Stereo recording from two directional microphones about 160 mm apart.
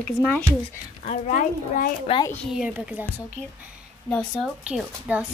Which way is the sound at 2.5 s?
5° right (ahead or behind).